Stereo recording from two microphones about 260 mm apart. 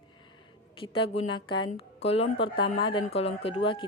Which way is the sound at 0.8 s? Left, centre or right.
Left.